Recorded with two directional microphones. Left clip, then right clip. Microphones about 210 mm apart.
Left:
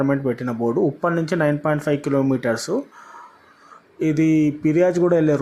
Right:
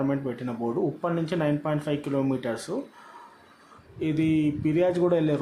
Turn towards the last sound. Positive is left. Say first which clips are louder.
# left 6 dB
turn(degrees=20)  # may be behind; listen again after turning